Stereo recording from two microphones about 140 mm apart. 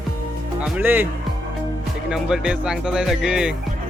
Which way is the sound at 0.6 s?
10° right (ahead or behind).